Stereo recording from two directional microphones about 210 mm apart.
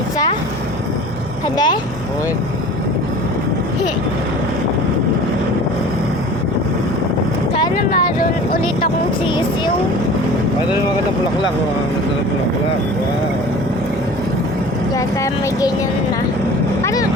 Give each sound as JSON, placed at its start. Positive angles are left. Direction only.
{"t": 1.5, "sound": "speech", "side_deg": 20}
{"t": 14.9, "sound": "speech", "side_deg": 15}
{"t": 16.8, "sound": "vehicle", "side_deg": 15}